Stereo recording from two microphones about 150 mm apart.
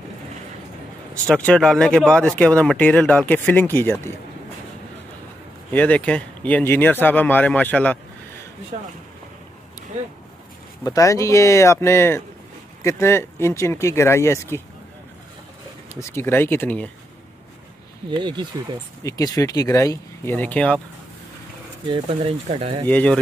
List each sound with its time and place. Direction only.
1.3 s speech: 5° left (ahead or behind)
5.7 s speech: 10° left (ahead or behind)
10.8 s speech: 25° left (ahead or behind)
15.9 s speech: 15° left (ahead or behind)
18.1 s speech: 30° right (ahead or behind)
19.0 s speech: 20° left (ahead or behind)
21.8 s speech: 35° right (ahead or behind)
22.8 s speech: 10° left (ahead or behind)